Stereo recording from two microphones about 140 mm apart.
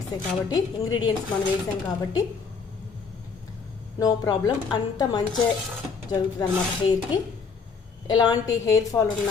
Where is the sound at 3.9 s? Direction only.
25° left (ahead or behind).